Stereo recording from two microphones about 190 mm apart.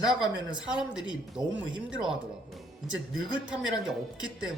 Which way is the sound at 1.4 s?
20° right (ahead or behind).